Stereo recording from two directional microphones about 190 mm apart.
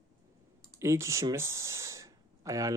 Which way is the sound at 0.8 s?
15° right (ahead or behind).